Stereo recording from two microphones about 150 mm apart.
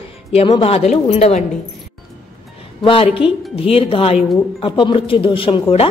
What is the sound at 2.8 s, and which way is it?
A woman's voice, 35° left (ahead or behind).